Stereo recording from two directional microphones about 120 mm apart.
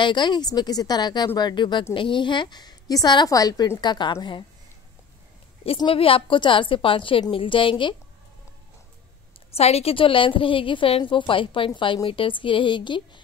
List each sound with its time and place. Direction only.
0.0 s a woman's voice: 40° left (ahead or behind)
5.9 s a woman's voice: 50° left (ahead or behind)
9.6 s a woman's voice: 60° left (ahead or behind); by 13.2 s 40° left (ahead or behind)